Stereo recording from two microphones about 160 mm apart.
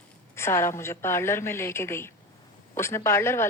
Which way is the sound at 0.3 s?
15° left (ahead or behind).